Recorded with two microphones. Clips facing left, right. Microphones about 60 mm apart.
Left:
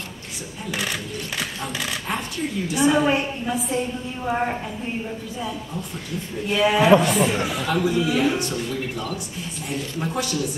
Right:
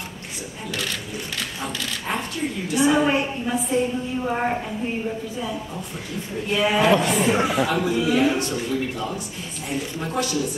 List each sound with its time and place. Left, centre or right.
0.7 s speech: centre
2.7 s a woman's voice: centre